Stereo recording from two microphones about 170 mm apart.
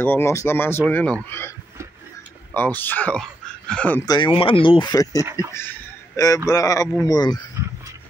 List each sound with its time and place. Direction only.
0.0 s speech: 15° left (ahead or behind)
2.5 s speech: 10° left (ahead or behind)
4.0 s speech: 25° left (ahead or behind)
7.6 s a sound: 15° right (ahead or behind)